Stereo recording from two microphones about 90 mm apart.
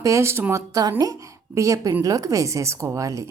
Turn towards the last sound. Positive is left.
turn(degrees=-35)  # may be behind; listen again after turning